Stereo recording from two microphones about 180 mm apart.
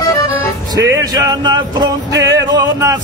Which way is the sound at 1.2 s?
20° right (ahead or behind).